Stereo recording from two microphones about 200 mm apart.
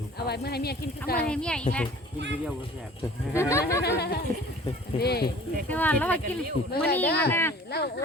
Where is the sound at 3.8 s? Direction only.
55° left (ahead or behind).